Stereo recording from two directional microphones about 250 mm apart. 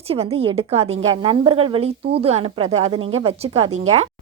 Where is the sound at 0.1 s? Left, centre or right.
Right.